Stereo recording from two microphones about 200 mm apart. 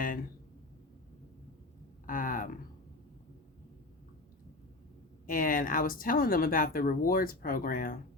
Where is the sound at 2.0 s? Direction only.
40° left (ahead or behind).